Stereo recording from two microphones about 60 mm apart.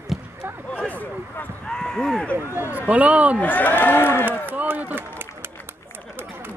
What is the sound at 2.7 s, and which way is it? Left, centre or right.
Speech, right.